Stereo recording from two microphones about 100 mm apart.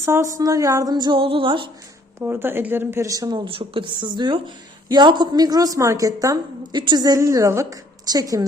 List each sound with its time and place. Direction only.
0.0 s a woman's voice: 30° right (ahead or behind); by 1.2 s 45° right (ahead or behind)
1.2 s speech: 65° right (ahead or behind)
2.1 s speech: 20° right (ahead or behind); by 3.5 s 45° right (ahead or behind)
3.5 s a woman's voice: 65° right (ahead or behind); by 8.4 s 40° right (ahead or behind)